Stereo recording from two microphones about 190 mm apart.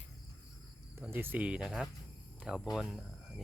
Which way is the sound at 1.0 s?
10° right (ahead or behind).